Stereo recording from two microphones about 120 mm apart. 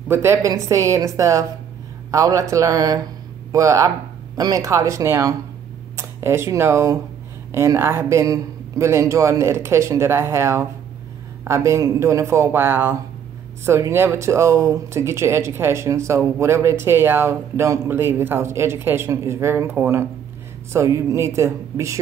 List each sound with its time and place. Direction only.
0.1 s speech: 20° right (ahead or behind)